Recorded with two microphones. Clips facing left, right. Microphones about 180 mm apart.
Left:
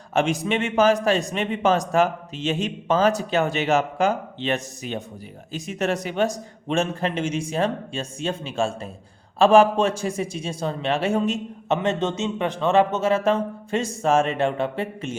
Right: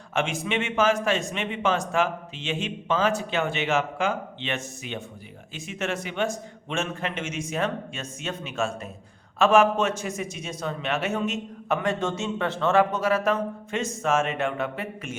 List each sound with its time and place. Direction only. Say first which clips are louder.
0.1 s a man's voice: left 5 dB; 35° left (ahead or behind)